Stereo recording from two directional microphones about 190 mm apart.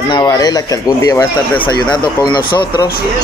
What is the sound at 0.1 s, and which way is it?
Speech, 20° left (ahead or behind).